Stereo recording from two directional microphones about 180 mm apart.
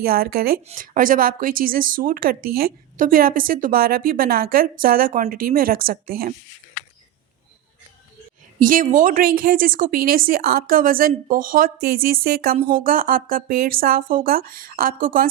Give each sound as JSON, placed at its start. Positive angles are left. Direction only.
{"t": 0.0, "sound": "speech", "side_deg": -55}
{"t": 8.6, "sound": "speech", "side_deg": -50}